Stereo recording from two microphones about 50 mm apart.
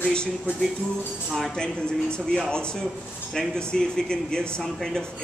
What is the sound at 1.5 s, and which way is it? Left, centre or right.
Speech, centre.